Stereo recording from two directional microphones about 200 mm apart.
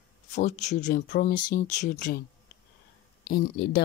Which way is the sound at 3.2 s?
55° left (ahead or behind).